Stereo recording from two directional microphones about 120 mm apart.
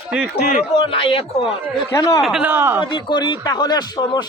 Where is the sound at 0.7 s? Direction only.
45° left (ahead or behind).